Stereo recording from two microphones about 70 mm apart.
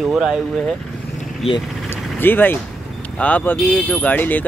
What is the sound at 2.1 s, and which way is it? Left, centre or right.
Speech, left.